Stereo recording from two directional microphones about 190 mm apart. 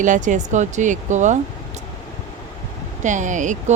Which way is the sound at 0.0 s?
40° right (ahead or behind).